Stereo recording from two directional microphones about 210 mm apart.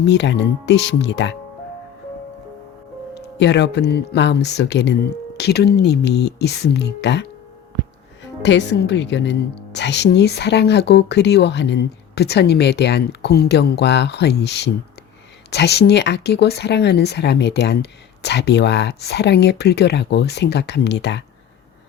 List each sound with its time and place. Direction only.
0.0 s speech: 55° left (ahead or behind)
3.2 s a woman's voice: 55° left (ahead or behind)
8.4 s a woman's voice: 55° left (ahead or behind)